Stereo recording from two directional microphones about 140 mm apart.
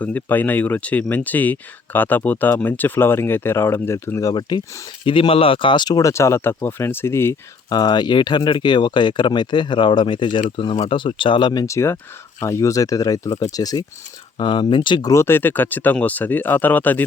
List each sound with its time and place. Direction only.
0.0 s speech: 10° left (ahead or behind)
7.7 s speech: 30° left (ahead or behind)
11.6 s speech: 20° left (ahead or behind)
14.3 s speech: 40° left (ahead or behind)
15.1 s speech: 15° left (ahead or behind)